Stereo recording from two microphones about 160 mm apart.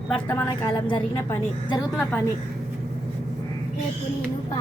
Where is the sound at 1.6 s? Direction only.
25° left (ahead or behind).